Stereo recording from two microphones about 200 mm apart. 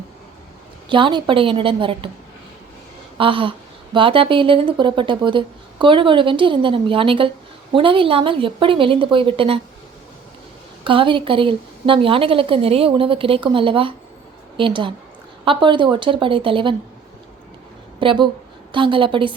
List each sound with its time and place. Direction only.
0.9 s speech: 25° right (ahead or behind)
3.2 s speech: 25° right (ahead or behind)
10.8 s a woman's voice: 25° right (ahead or behind)
18.0 s speech: 25° right (ahead or behind)